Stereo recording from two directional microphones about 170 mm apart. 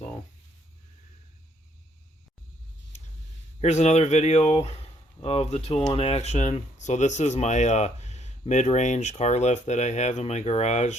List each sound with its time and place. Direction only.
3.6 s speech: 40° left (ahead or behind)